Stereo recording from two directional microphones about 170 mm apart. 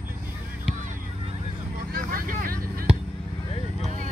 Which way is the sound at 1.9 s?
55° right (ahead or behind).